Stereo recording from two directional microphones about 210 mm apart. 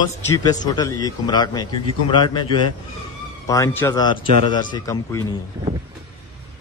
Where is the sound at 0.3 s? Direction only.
20° left (ahead or behind).